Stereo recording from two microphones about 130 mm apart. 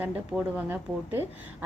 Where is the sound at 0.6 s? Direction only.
15° right (ahead or behind).